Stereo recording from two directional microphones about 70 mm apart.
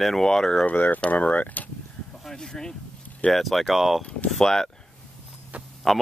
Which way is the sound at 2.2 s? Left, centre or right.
Centre.